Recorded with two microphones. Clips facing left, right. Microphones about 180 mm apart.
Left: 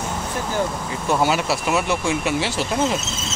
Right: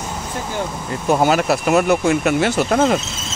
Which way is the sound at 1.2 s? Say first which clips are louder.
Right 5 dB; 55° right (ahead or behind).